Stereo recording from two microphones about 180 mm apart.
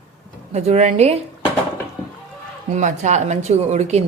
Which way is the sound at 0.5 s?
35° right (ahead or behind).